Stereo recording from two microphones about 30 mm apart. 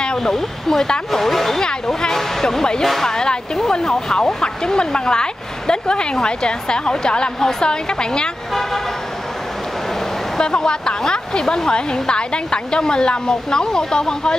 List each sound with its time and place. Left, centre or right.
0.2 s speech: centre
10.4 s speech: left
11.7 s speech: left